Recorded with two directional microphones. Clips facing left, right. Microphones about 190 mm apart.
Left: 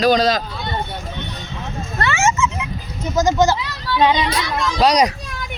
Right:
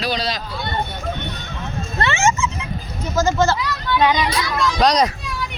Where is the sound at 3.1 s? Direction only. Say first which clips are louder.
Left 2 dB; 15° left (ahead or behind).